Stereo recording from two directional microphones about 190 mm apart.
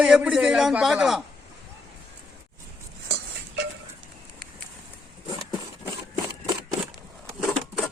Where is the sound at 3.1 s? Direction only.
60° right (ahead or behind).